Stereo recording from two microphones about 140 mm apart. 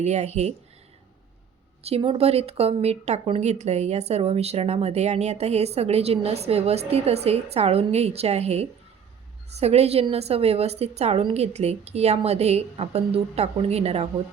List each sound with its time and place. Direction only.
0.0 s speech: 55° right (ahead or behind)
1.8 s speech: 45° right (ahead or behind)